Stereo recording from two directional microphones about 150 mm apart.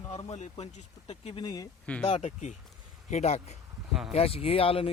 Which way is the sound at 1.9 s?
10° left (ahead or behind).